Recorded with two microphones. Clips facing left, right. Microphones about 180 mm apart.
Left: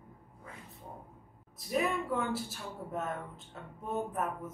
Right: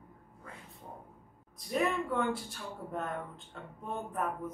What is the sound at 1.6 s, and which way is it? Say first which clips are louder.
Speech: even; 5° left (ahead or behind).